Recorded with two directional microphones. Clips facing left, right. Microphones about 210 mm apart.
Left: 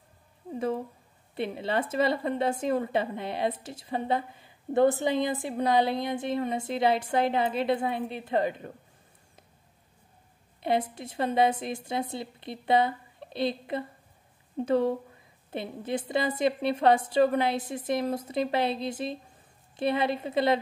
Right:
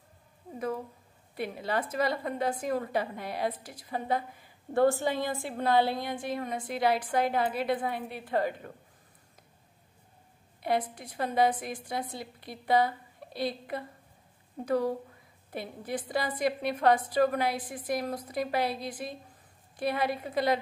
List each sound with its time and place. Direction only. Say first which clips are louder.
1.3 s a woman's voice: left 3 dB; 25° left (ahead or behind)
10.6 s a woman's voice: left 2 dB; 25° left (ahead or behind)